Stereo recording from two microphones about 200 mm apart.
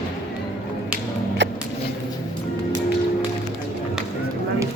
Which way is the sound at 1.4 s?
60° right (ahead or behind).